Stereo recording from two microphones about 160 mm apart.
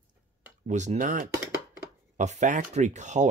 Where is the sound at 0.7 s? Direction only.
50° right (ahead or behind).